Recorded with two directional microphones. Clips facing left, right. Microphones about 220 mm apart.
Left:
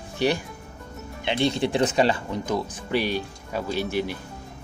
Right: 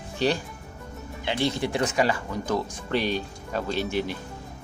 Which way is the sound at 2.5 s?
10° left (ahead or behind).